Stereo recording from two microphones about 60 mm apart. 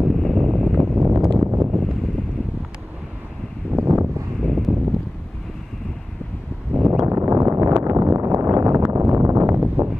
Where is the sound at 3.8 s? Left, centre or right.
Right.